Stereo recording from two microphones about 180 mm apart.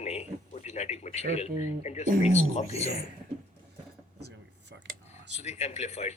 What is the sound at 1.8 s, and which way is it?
Speech, 40° left (ahead or behind).